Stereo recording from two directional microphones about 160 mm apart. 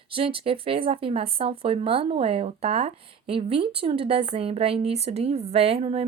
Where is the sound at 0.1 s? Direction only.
35° right (ahead or behind).